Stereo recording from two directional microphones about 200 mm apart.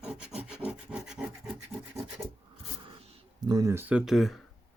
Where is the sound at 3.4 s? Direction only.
20° right (ahead or behind); by 4.4 s centre (ahead or behind).